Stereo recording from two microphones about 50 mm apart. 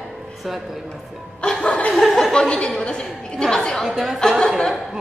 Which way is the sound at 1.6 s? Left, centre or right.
Left.